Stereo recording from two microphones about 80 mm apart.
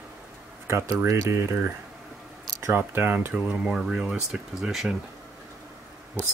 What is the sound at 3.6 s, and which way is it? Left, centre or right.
Speech, centre.